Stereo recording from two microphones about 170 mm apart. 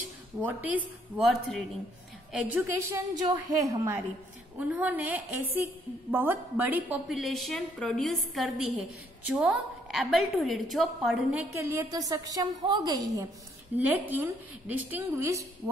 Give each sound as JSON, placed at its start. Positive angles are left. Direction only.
{"t": 0.4, "sound": "a woman's voice", "side_deg": -10}
{"t": 2.3, "sound": "a woman's voice", "side_deg": -10}
{"t": 3.3, "sound": "a woman's voice", "side_deg": -20}
{"t": 4.6, "sound": "a woman's voice", "side_deg": -10}
{"t": 11.5, "sound": "a woman's voice", "side_deg": -15}
{"t": 13.7, "sound": "a woman's voice", "side_deg": -10}